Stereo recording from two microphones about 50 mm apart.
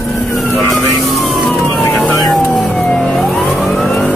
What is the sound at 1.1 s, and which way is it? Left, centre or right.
Emergency vehicle, centre.